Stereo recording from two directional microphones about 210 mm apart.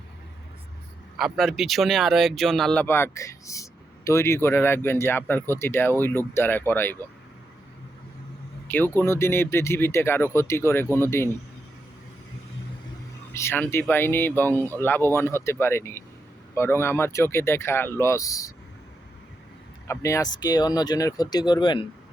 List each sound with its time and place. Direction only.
1.2 s speech: centre (ahead or behind)
8.6 s speech: 10° left (ahead or behind)
13.3 s speech: 10° left (ahead or behind)
19.9 s speech: 15° left (ahead or behind)